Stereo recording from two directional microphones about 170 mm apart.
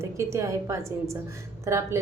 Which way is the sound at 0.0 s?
15° right (ahead or behind).